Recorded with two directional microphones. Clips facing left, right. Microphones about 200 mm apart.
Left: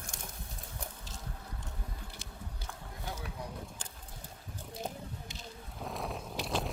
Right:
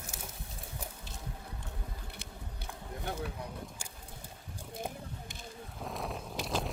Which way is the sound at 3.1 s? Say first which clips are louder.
Right 5 dB; 60° right (ahead or behind).